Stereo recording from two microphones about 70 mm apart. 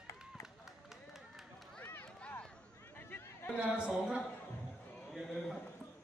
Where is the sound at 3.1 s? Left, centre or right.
Left.